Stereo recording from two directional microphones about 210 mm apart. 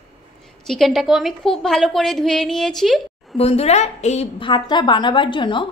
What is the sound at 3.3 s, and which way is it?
A woman's voice, 30° left (ahead or behind).